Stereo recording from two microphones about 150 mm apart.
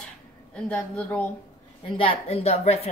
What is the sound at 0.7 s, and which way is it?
Speech, 10° left (ahead or behind).